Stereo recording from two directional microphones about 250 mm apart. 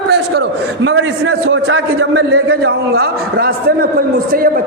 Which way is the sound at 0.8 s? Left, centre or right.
Right.